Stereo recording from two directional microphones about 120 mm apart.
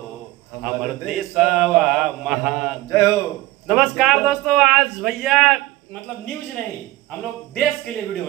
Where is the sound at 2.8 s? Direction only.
30° left (ahead or behind).